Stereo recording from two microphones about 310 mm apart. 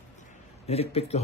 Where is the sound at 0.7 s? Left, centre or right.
Centre.